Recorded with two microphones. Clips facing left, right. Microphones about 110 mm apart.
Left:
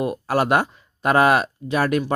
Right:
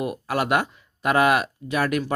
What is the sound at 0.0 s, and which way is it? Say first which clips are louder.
Speech: left 4 dB; 30° left (ahead or behind).